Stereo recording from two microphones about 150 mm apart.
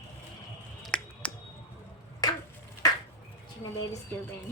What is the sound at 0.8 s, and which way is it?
Finger snapping, 5° left (ahead or behind).